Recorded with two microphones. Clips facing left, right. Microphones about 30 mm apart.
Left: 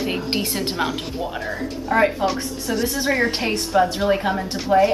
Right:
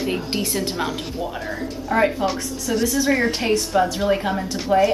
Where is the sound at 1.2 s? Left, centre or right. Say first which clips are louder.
Left 1 dB; centre.